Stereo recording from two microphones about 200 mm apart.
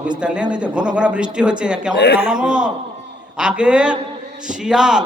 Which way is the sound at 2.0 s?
55° left (ahead or behind).